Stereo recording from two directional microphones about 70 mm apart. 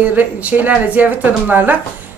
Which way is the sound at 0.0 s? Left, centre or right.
Right.